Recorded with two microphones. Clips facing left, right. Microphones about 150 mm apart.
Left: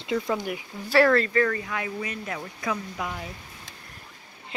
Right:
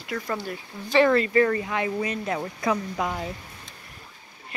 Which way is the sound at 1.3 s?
25° right (ahead or behind).